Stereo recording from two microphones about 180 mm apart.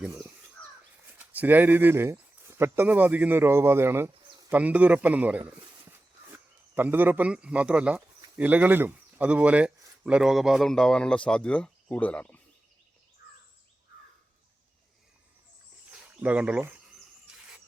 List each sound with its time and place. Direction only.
1.0 s a man's voice: 10° right (ahead or behind); by 12.4 s 5° left (ahead or behind)
15.9 s cricket: 5° right (ahead or behind)
17.3 s a sound: 5° right (ahead or behind)